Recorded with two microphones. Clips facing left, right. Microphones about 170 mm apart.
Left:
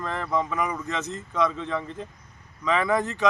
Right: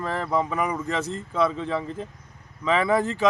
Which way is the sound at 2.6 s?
30° right (ahead or behind).